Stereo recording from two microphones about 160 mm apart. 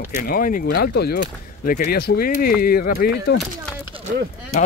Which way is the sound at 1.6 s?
70° left (ahead or behind).